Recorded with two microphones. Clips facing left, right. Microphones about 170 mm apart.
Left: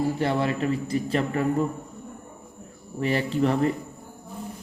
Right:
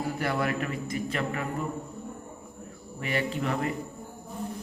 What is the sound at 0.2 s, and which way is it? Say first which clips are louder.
A man's voice: left 4 dB; 25° left (ahead or behind).